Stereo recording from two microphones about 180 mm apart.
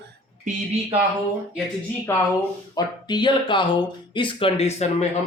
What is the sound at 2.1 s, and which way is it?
Speech, 15° left (ahead or behind).